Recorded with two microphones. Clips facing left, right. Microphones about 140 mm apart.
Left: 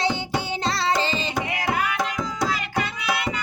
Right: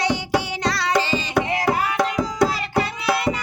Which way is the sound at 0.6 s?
25° left (ahead or behind).